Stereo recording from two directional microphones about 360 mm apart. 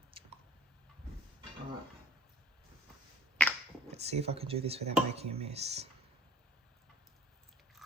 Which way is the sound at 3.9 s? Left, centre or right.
Centre.